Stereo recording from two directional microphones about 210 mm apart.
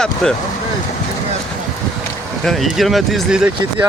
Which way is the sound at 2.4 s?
Centre (ahead or behind).